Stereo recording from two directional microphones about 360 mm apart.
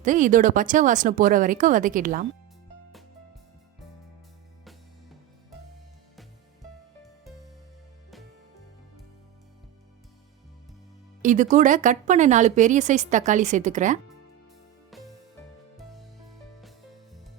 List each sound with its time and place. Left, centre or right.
0.0 s speech: right
6.1 s music: centre
11.2 s speech: right
14.8 s music: centre